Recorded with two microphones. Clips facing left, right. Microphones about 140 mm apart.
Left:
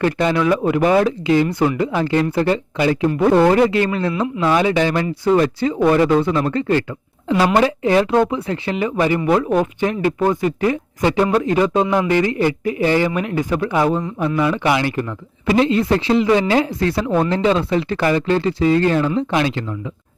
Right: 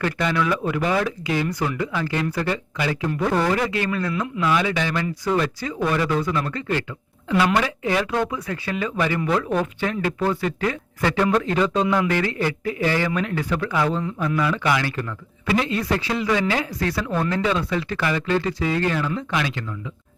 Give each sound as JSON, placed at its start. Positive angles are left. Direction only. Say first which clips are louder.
{"t": 0.0, "sound": "a man's voice", "louder": "left 6 dB", "side_deg": 35}